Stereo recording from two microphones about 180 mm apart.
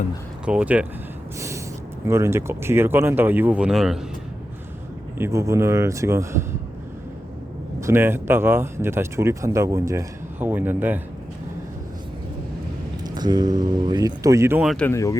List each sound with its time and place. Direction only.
0.4 s speech: 5° right (ahead or behind)
1.4 s gasp: 15° right (ahead or behind)
2.0 s speech: 15° right (ahead or behind)
5.1 s speech: 15° right (ahead or behind)
7.8 s speech: 15° right (ahead or behind)
13.1 s speech: 20° right (ahead or behind)
14.7 s speech: 5° left (ahead or behind)
14.9 s speech: 15° left (ahead or behind)